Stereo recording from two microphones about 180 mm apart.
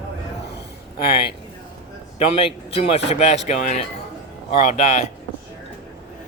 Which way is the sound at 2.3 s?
35° left (ahead or behind).